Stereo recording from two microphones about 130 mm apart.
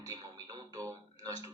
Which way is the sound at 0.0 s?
25° right (ahead or behind).